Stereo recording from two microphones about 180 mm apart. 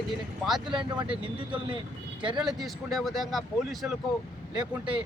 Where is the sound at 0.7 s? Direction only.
25° right (ahead or behind).